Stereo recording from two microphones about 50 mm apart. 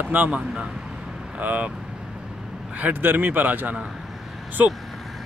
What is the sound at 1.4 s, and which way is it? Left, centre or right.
Speech, right.